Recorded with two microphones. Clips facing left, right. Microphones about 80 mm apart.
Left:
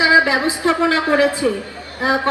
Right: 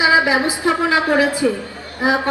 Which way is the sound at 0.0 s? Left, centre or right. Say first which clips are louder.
Left 1 dB; right.